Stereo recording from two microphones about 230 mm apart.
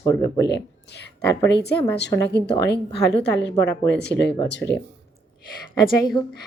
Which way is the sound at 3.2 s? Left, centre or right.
Left.